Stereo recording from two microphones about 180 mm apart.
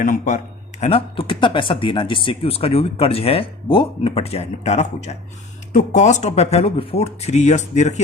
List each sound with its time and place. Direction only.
0.0 s speech: 45° left (ahead or behind)